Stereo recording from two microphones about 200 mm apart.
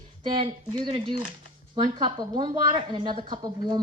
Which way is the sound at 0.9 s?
25° right (ahead or behind).